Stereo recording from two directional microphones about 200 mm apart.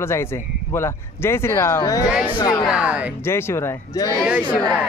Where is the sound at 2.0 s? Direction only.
5° right (ahead or behind).